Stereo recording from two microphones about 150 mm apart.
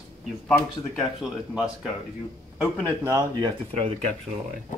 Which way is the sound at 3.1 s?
25° right (ahead or behind).